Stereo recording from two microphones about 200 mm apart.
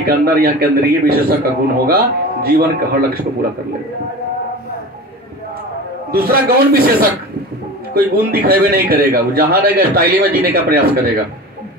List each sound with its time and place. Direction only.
0.0 s a man's voice: 50° right (ahead or behind)
6.1 s a man's voice: 50° right (ahead or behind)